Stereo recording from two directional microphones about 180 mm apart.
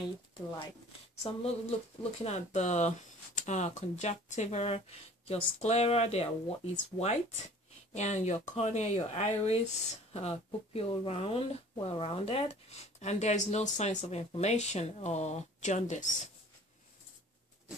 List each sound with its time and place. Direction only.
1.2 s speech: 35° left (ahead or behind)